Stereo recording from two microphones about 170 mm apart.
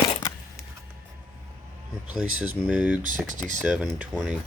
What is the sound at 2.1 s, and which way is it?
Speech, 5° right (ahead or behind).